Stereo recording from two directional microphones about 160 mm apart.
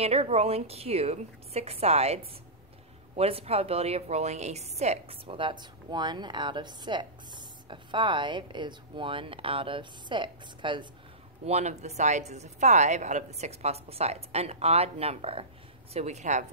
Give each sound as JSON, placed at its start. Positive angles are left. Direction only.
{"t": 0.0, "sound": "a woman's voice", "side_deg": -40}
{"t": 11.4, "sound": "a woman's voice", "side_deg": -40}